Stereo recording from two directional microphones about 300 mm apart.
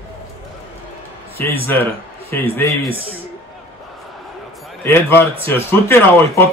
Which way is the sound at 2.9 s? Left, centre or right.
Centre.